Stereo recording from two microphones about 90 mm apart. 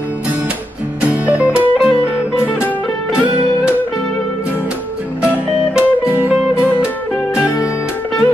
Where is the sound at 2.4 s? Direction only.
30° left (ahead or behind).